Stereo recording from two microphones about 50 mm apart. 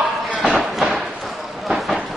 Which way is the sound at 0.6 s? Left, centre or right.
Centre.